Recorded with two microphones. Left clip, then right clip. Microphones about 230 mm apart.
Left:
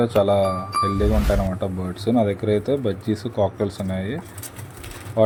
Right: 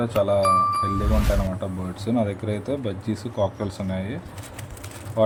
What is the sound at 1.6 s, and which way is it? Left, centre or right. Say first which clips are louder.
Speech: left 4 dB; centre.